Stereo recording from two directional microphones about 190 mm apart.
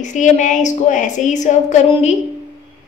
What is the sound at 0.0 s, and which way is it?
A woman's voice, 40° left (ahead or behind).